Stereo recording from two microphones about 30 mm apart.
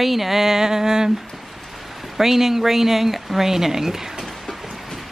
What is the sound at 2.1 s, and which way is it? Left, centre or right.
Speech, centre.